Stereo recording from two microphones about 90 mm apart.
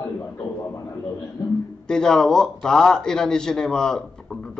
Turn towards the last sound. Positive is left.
turn(degrees=5)  # may be behind; listen again after turning